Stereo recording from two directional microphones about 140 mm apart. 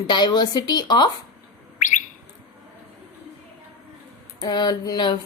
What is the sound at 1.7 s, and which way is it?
Bird, 65° left (ahead or behind).